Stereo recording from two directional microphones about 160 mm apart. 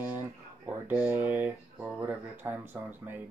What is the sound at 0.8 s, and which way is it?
Speech, 15° right (ahead or behind).